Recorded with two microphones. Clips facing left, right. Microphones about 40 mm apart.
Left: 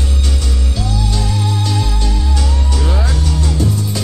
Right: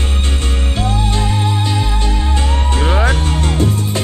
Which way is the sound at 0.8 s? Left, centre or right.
Right.